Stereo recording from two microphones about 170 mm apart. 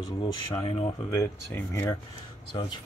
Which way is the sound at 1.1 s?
15° left (ahead or behind).